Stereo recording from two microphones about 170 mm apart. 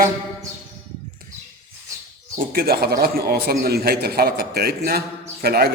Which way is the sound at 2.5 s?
65° right (ahead or behind).